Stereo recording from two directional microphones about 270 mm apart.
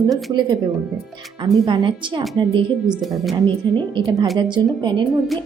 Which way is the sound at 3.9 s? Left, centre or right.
Centre.